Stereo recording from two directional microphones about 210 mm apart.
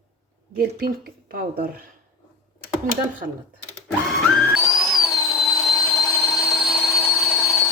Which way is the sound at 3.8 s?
Centre (ahead or behind).